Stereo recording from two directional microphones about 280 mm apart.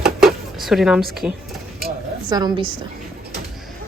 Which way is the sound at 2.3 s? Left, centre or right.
Centre.